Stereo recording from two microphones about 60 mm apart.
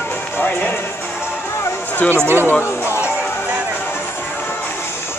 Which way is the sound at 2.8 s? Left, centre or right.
Left.